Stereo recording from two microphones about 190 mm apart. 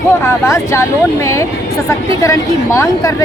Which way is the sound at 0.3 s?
15° left (ahead or behind).